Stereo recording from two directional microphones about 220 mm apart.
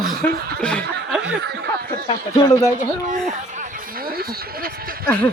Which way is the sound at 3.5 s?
40° right (ahead or behind).